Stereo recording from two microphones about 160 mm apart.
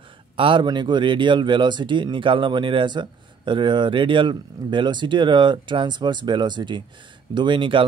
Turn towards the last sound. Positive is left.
turn(degrees=-30)  # may be behind; listen again after turning